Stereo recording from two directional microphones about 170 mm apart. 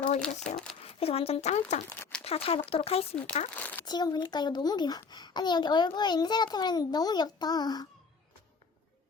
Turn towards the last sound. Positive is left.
turn(degrees=25)  # may be behind; listen again after turning